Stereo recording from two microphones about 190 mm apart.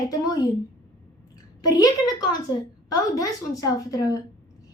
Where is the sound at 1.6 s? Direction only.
20° left (ahead or behind).